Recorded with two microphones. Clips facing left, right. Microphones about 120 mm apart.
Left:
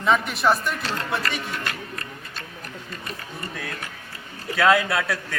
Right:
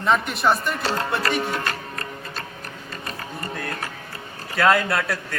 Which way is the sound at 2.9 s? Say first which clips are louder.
Right 4 dB; 45° right (ahead or behind).